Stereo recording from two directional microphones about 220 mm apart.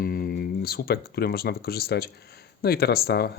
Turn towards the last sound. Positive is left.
turn(degrees=45)  # may be behind; listen again after turning